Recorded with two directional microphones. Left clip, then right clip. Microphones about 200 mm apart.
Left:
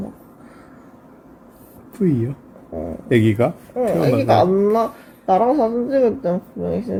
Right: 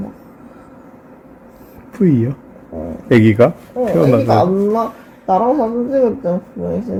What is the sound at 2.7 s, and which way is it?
Speech, 35° left (ahead or behind).